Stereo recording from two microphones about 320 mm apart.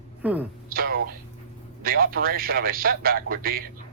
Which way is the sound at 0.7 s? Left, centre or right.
Right.